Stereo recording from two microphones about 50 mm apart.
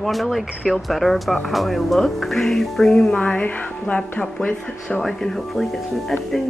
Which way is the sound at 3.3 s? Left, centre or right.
Left.